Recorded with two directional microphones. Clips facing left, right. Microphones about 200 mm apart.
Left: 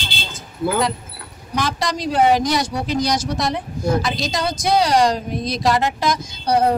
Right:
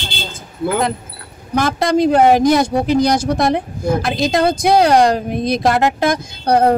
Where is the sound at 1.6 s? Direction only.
55° right (ahead or behind).